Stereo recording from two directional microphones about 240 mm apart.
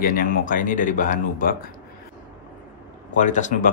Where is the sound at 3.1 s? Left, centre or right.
Left.